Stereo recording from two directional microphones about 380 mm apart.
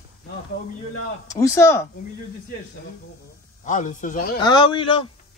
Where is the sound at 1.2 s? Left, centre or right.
Centre.